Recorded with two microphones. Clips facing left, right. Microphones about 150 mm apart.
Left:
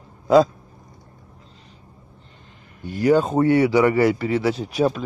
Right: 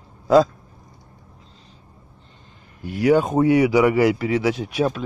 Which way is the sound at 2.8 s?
5° right (ahead or behind).